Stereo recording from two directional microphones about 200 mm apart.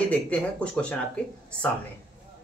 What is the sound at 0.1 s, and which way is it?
Speech, 5° left (ahead or behind).